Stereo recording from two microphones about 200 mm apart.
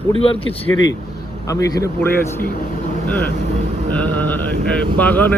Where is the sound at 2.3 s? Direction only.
45° left (ahead or behind).